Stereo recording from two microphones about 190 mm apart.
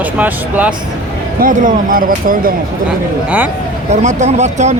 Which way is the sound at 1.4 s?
45° right (ahead or behind).